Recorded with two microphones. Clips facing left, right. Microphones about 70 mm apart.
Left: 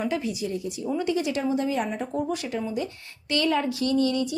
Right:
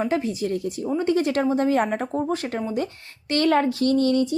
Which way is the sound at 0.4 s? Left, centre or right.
Right.